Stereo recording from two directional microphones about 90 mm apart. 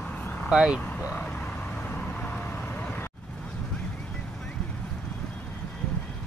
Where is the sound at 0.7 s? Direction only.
15° left (ahead or behind).